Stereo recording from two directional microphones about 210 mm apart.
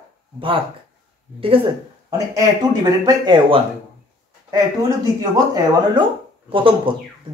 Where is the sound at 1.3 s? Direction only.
25° right (ahead or behind).